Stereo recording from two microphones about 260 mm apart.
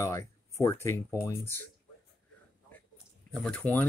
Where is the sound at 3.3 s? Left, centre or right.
Centre.